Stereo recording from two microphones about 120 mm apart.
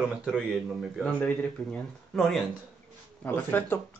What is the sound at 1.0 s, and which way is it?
Speech, 10° left (ahead or behind).